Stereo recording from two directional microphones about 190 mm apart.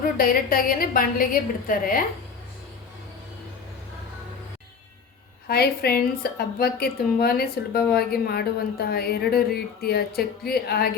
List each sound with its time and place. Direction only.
0.2 s a woman's voice: 50° left (ahead or behind)
5.5 s a woman's voice: 55° left (ahead or behind)